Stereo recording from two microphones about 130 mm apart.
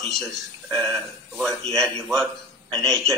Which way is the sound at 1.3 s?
5° left (ahead or behind).